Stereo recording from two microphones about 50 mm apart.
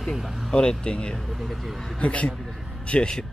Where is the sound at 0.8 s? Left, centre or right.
Left.